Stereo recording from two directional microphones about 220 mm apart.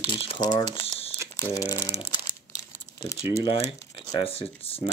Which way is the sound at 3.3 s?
25° left (ahead or behind).